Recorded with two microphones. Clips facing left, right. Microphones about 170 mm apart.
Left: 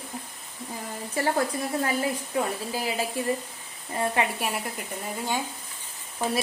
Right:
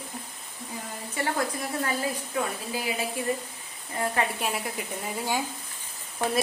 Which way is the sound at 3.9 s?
25° left (ahead or behind).